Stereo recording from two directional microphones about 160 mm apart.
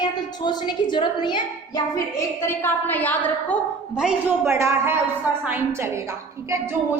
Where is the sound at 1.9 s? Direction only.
15° left (ahead or behind).